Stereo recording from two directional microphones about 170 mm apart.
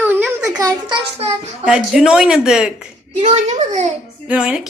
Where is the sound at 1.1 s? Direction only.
35° right (ahead or behind).